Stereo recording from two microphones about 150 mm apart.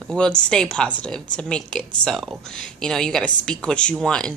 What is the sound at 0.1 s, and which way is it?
Speech, 5° left (ahead or behind).